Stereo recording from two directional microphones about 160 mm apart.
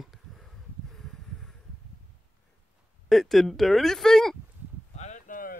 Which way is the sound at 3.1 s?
Centre (ahead or behind).